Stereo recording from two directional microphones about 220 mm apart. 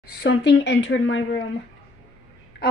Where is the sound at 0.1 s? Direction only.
50° left (ahead or behind).